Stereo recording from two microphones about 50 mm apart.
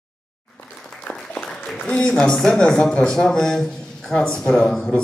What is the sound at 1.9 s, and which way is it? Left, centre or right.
Speech, centre.